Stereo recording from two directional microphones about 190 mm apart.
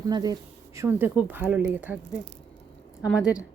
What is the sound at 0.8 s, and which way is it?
A woman's voice, 10° right (ahead or behind).